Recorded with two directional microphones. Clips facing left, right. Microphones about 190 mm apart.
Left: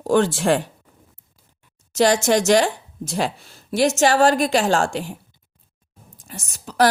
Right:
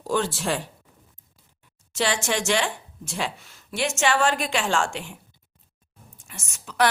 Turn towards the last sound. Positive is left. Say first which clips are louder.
# left 5 dB
turn(degrees=35)  # may be behind; listen again after turning